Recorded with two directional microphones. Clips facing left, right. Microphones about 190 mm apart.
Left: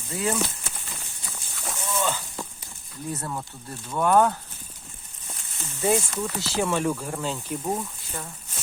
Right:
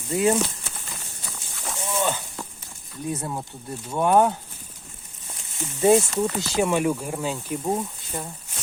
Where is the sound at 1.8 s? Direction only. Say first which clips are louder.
Right 2 dB; 20° right (ahead or behind).